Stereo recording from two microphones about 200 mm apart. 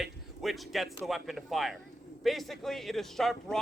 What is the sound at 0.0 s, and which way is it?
Speech, centre (ahead or behind).